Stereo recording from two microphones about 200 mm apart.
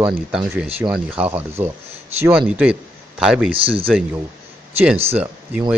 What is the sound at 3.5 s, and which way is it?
Speech, 25° right (ahead or behind).